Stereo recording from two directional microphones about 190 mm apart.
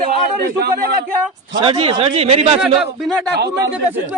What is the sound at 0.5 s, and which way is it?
Speech, 55° right (ahead or behind).